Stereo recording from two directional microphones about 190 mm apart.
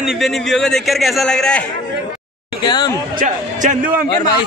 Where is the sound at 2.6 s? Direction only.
20° left (ahead or behind).